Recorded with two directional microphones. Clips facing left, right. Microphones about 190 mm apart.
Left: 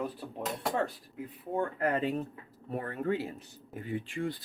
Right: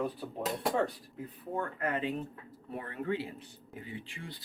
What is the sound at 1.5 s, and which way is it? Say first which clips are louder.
Speech: left 4 dB; 25° left (ahead or behind).